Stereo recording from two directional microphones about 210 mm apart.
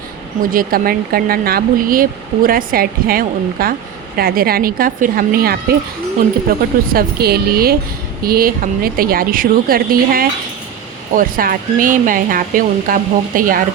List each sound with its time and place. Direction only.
0.5 s speech: 45° right (ahead or behind)
6.9 s speech: 50° right (ahead or behind)